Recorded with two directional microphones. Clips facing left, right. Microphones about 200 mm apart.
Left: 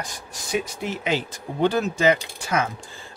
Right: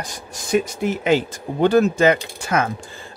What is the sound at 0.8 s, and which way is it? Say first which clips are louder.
Speech: right 7 dB; 50° right (ahead or behind).